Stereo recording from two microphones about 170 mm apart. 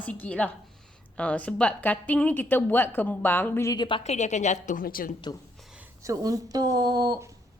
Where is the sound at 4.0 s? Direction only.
40° left (ahead or behind).